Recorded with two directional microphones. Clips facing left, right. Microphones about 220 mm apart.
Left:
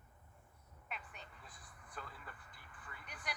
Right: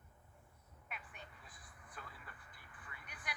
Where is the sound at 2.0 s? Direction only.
45° left (ahead or behind).